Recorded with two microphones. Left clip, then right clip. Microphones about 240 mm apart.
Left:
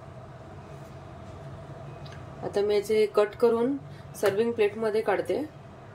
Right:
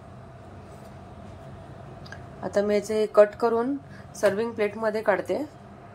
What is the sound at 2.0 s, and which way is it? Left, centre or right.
A woman's voice, centre.